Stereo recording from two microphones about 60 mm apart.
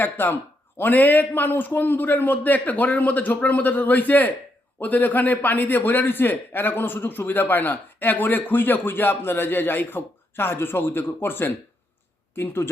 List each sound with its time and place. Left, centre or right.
0.0 s a man's voice: left